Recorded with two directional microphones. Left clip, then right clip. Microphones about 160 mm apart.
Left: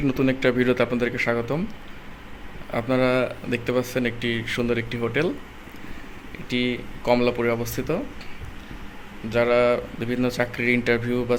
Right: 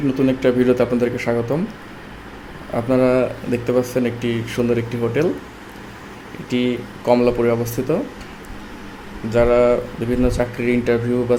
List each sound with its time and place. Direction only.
0.1 s speech: 10° left (ahead or behind)
2.7 s speech: 5° left (ahead or behind)
6.5 s speech: centre (ahead or behind)
9.3 s speech: centre (ahead or behind)